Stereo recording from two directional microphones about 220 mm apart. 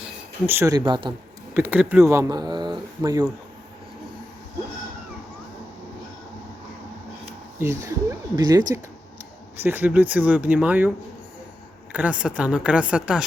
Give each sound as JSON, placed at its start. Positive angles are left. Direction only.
{"t": 0.4, "sound": "speech", "side_deg": -10}
{"t": 1.5, "sound": "speech", "side_deg": -10}
{"t": 7.6, "sound": "a woman's voice", "side_deg": -10}